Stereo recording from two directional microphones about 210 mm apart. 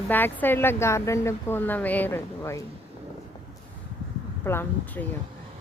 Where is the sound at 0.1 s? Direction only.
10° left (ahead or behind).